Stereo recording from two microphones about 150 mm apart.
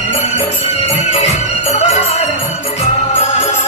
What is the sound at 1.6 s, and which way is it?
Music, 45° left (ahead or behind).